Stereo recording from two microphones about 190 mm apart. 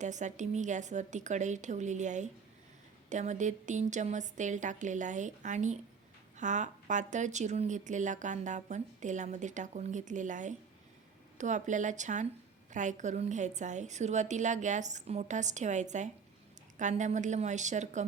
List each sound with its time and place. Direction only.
0.0 s speech: 40° right (ahead or behind)